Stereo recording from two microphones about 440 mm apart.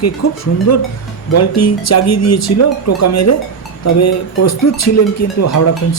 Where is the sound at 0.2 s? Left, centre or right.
Left.